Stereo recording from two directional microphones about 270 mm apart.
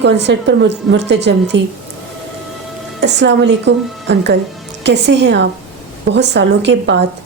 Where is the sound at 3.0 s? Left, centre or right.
Right.